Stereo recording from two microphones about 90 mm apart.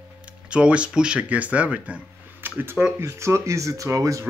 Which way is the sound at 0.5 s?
10° right (ahead or behind).